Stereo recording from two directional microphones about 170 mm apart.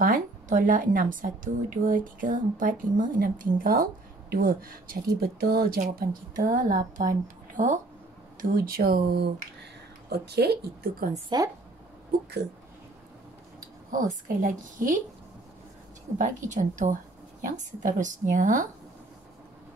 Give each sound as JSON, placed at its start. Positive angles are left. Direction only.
{"t": 0.0, "sound": "a woman's voice", "side_deg": -55}
{"t": 8.4, "sound": "a woman's voice", "side_deg": -60}
{"t": 11.2, "sound": "a woman's voice", "side_deg": -20}
{"t": 13.9, "sound": "a woman's voice", "side_deg": -50}
{"t": 16.1, "sound": "a woman's voice", "side_deg": -50}